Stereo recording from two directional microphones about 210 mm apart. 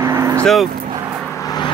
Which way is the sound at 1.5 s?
20° left (ahead or behind).